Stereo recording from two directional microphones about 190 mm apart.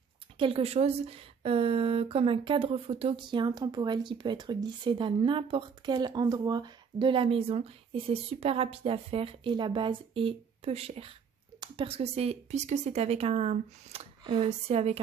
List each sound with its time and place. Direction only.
0.4 s speech: 30° right (ahead or behind)